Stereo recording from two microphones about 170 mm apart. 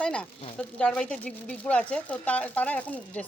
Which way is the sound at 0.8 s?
5° left (ahead or behind).